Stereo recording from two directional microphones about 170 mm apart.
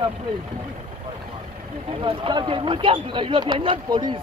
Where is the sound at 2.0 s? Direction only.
30° right (ahead or behind).